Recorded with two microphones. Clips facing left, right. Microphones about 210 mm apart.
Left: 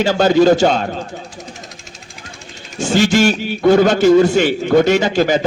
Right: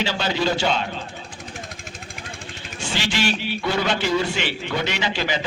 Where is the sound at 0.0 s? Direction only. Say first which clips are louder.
Left 12 dB; 45° left (ahead or behind).